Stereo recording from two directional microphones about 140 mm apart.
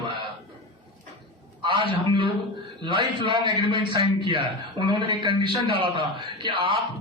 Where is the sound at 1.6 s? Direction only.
35° right (ahead or behind).